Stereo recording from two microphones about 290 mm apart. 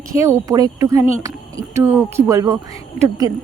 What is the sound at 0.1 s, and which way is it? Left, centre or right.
A woman's voice, centre.